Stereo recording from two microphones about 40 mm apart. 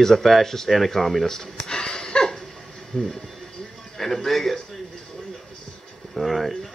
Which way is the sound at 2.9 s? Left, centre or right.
Centre.